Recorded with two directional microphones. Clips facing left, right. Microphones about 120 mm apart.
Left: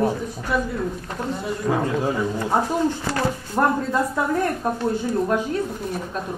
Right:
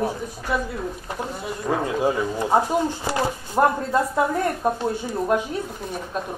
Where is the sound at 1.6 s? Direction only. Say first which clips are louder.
Right 1 dB; 15° right (ahead or behind).